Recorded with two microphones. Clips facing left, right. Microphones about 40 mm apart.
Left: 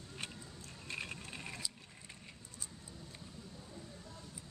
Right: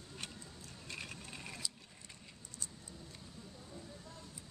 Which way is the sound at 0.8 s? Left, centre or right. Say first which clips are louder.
Left 3 dB; left.